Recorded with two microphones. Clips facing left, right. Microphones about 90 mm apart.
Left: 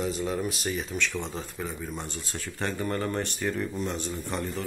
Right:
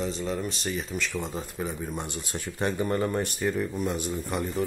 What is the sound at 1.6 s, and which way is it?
Speech, 15° right (ahead or behind).